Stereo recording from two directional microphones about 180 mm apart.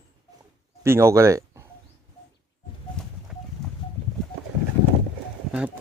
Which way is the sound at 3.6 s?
Centre (ahead or behind).